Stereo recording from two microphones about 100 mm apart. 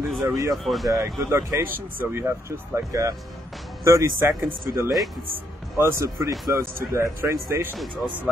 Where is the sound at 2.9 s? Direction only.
30° right (ahead or behind).